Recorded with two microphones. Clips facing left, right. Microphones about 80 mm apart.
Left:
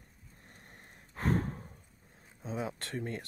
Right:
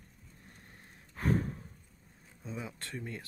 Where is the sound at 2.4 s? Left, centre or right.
Left.